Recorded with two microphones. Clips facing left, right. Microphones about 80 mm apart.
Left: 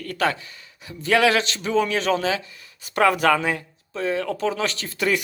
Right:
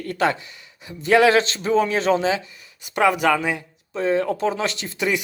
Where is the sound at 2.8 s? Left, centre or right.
Centre.